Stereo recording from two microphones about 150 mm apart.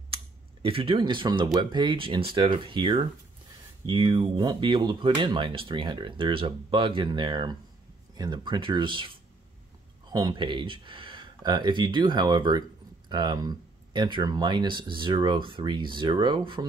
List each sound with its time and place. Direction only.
0.1 s speech: 40° right (ahead or behind)
10.1 s speech: 30° right (ahead or behind)